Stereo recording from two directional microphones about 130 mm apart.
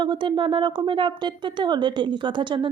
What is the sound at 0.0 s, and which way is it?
Speech, 40° right (ahead or behind).